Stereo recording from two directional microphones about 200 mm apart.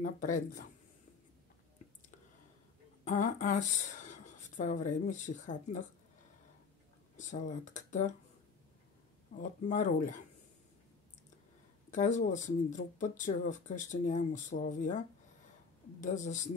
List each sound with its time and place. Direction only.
0.0 s speech: 40° left (ahead or behind)
3.1 s speech: 40° left (ahead or behind)
7.2 s speech: 40° left (ahead or behind)
9.4 s speech: 40° left (ahead or behind)
11.9 s speech: 40° left (ahead or behind)